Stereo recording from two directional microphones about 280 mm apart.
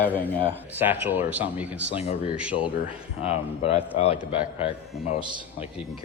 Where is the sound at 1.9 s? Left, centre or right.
Left.